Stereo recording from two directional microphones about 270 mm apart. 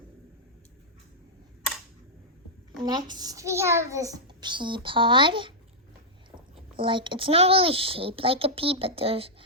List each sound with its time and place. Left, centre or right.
2.8 s a child's voice: centre
6.7 s a child's voice: centre